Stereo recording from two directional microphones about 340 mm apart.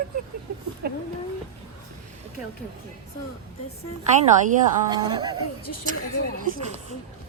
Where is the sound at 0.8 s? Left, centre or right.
Right.